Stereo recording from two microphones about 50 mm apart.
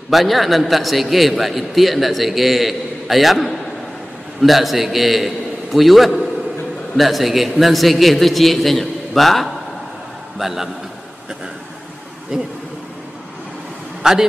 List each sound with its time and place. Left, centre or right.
0.1 s a man's voice: centre
12.3 s speech: centre
14.0 s speech: centre